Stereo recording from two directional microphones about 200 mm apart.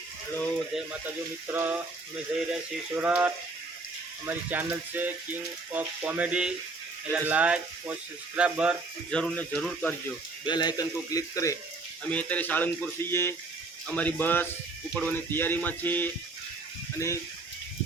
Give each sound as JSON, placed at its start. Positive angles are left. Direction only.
{"t": 0.3, "sound": "speech", "side_deg": 5}
{"t": 1.5, "sound": "speech", "side_deg": -5}
{"t": 3.0, "sound": "speech", "side_deg": -10}
{"t": 10.4, "sound": "speech", "side_deg": 20}